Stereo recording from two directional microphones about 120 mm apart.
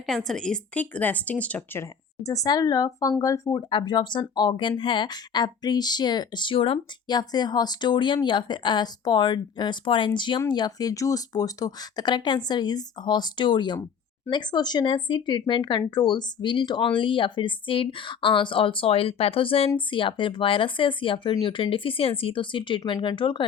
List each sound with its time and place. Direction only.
0.0 s speech: centre (ahead or behind); by 3.6 s 25° left (ahead or behind)
3.7 s speech: 40° left (ahead or behind)
7.2 s speech: 35° left (ahead or behind)